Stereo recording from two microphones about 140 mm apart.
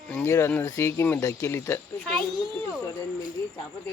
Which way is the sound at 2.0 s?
5° left (ahead or behind).